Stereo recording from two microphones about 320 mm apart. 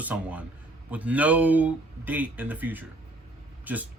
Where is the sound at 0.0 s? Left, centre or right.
Centre.